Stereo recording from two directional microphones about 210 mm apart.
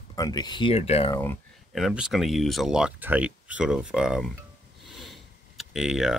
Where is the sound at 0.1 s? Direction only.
20° left (ahead or behind).